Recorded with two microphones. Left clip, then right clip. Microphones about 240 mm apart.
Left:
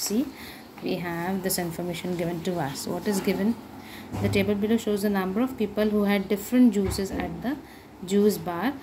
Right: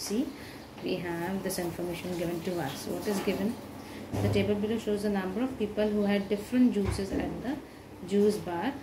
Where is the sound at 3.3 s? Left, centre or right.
Left.